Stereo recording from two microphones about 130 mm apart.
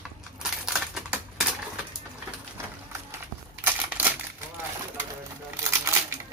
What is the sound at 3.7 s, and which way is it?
Crumpling, 15° right (ahead or behind).